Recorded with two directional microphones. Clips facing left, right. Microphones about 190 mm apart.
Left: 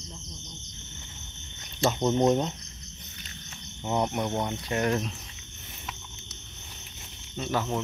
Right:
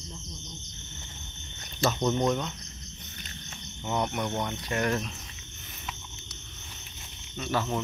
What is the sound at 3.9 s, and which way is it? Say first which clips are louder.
Cricket: left 2 dB; 25° left (ahead or behind).